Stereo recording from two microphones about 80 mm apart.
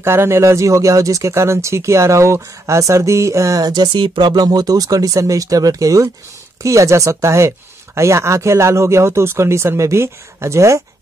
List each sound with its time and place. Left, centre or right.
0.0 s speech: right